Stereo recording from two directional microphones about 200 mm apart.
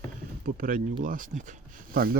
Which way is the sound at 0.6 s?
45° right (ahead or behind).